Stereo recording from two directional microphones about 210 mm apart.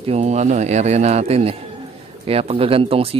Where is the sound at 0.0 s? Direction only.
30° right (ahead or behind).